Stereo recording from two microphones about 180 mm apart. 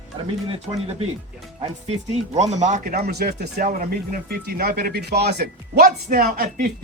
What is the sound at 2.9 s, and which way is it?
Speech, 60° right (ahead or behind).